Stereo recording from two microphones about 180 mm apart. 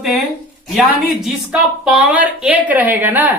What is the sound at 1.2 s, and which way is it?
Speech, 5° right (ahead or behind).